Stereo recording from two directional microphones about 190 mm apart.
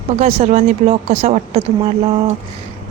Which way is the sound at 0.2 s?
35° right (ahead or behind).